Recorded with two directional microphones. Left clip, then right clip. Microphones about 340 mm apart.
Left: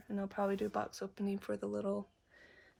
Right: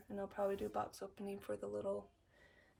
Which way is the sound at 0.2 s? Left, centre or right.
Left.